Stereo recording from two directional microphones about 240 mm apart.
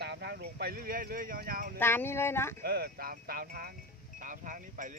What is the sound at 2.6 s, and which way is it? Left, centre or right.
Speech, right.